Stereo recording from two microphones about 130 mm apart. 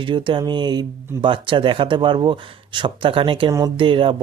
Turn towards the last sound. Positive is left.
turn(degrees=-40)  # may be behind; listen again after turning